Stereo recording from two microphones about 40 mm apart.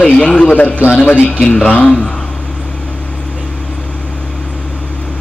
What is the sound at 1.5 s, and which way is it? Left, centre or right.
Speech, left.